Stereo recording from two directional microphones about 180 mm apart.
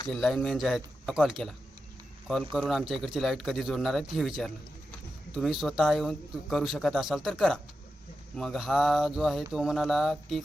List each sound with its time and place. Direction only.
0.1 s a man's voice: centre (ahead or behind)